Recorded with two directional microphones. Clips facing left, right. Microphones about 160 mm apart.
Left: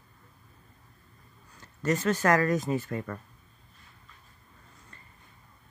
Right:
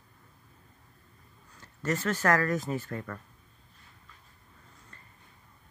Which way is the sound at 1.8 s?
15° left (ahead or behind).